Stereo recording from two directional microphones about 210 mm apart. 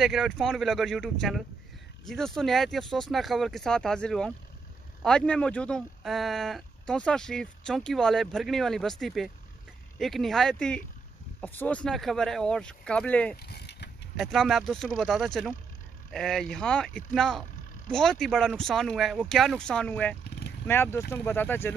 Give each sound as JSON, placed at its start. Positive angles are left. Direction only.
{"t": 0.0, "sound": "speech", "side_deg": 0}
{"t": 13.4, "sound": "a sound", "side_deg": 50}
{"t": 14.1, "sound": "speech", "side_deg": 0}